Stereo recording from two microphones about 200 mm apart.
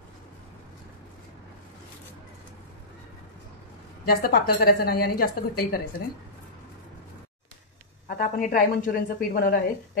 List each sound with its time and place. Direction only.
4.0 s a woman's voice: 50° left (ahead or behind)
8.2 s a woman's voice: 45° left (ahead or behind)